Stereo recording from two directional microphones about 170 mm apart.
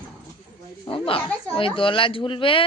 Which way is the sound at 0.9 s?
30° left (ahead or behind).